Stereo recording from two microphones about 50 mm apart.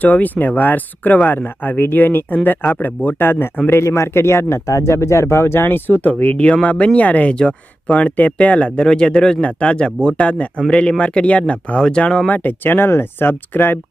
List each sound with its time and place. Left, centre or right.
0.0 s speech: left
3.2 s speech: left
3.8 s speech: left; by 12.2 s centre
12.3 s speech: left